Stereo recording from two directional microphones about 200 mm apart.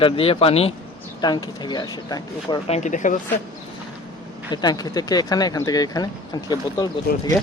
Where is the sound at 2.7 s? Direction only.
35° left (ahead or behind).